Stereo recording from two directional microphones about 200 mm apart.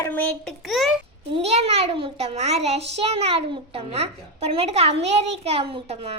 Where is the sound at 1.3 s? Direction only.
30° right (ahead or behind).